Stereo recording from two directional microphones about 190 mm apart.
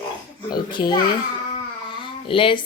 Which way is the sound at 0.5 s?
25° left (ahead or behind).